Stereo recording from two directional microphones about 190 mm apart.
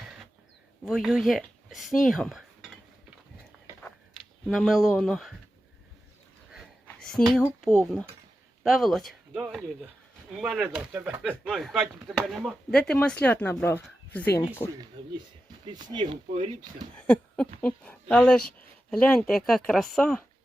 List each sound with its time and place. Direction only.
0.9 s speech: centre (ahead or behind)
3.8 s a sound: centre (ahead or behind)
7.3 s speech: 10° left (ahead or behind)
7.8 s speech: centre (ahead or behind)
10.4 s speech: 5° right (ahead or behind)
15.6 s speech: 20° right (ahead or behind)
16.9 s a sound: 5° left (ahead or behind)
17.6 s speech: 5° left (ahead or behind)